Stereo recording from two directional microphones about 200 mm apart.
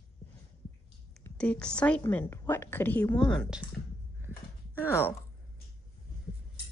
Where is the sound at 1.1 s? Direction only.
5° left (ahead or behind).